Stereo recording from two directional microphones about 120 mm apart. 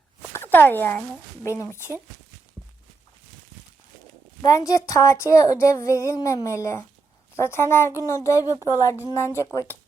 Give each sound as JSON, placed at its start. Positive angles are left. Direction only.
{"t": 0.3, "sound": "speech", "side_deg": 15}
{"t": 1.6, "sound": "speech", "side_deg": -20}
{"t": 4.4, "sound": "speech", "side_deg": 30}